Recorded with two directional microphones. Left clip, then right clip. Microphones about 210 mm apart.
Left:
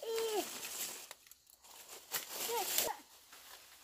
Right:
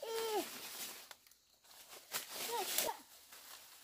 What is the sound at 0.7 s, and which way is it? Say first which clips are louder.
Crushing: left 4 dB; 45° left (ahead or behind).